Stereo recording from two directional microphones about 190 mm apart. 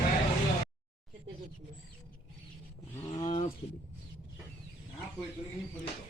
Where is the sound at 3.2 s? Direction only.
40° left (ahead or behind).